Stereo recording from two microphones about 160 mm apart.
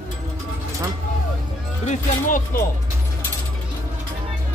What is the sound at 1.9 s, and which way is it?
Speech, 55° left (ahead or behind).